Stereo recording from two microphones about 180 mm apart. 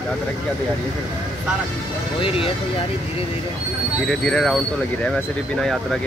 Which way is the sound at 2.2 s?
30° left (ahead or behind).